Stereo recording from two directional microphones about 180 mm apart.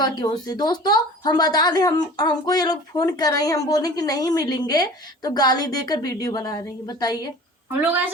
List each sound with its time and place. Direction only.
0.0 s a woman's voice: 20° left (ahead or behind)